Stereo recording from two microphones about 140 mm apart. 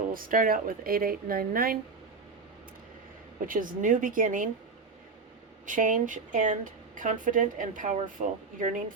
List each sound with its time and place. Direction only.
0.1 s speech: 85° right
3.4 s speech: 75° right (ahead or behind)
5.6 s speech: 70° right (ahead or behind)